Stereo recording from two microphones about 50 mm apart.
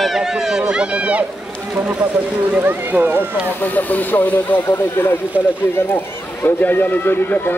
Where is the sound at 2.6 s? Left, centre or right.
Right.